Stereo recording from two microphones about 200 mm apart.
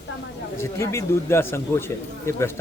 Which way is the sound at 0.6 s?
15° left (ahead or behind).